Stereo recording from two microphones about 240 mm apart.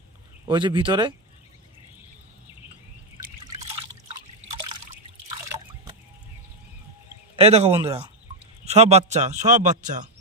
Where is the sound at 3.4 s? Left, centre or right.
Centre.